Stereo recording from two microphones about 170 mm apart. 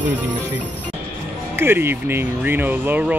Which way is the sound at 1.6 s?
15° right (ahead or behind).